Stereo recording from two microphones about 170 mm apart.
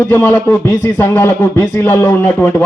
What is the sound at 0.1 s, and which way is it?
A man's voice, 10° left (ahead or behind).